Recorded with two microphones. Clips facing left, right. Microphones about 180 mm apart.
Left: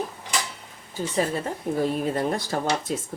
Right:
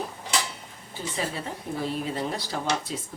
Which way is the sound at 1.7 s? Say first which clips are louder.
Left 6 dB; 50° left (ahead or behind).